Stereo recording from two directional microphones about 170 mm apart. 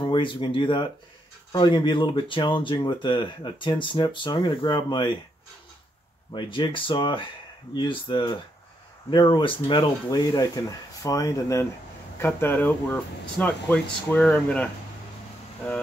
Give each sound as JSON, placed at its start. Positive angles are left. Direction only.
{"t": 0.0, "sound": "speech", "side_deg": 30}
{"t": 6.3, "sound": "speech", "side_deg": 30}